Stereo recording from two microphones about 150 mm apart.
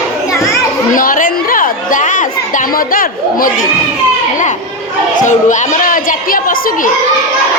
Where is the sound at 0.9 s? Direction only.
65° left (ahead or behind).